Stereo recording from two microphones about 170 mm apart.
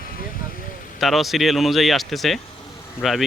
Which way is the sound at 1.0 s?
Centre (ahead or behind).